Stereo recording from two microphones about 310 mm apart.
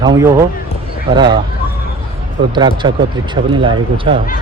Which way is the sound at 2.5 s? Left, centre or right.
Centre.